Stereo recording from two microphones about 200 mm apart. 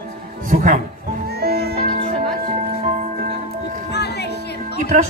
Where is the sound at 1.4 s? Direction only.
55° right (ahead or behind).